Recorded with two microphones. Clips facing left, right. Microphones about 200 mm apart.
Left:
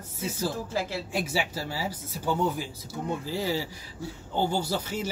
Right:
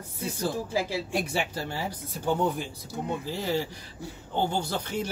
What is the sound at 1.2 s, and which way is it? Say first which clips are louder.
Speech: even; 5° left (ahead or behind).